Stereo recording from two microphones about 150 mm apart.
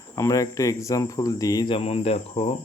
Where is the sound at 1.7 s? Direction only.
40° left (ahead or behind).